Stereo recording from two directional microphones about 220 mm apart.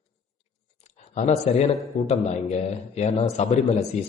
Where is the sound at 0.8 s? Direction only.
30° left (ahead or behind).